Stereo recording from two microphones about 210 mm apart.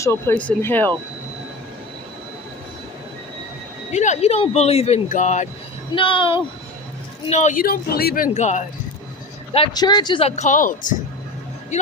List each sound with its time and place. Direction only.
0.0 s speech: 10° left (ahead or behind)
3.9 s speech: 35° left (ahead or behind)
5.9 s speech: 25° left (ahead or behind)
7.3 s speech: 35° left (ahead or behind)
9.5 s speech: 25° left (ahead or behind); by 10.9 s 40° left (ahead or behind)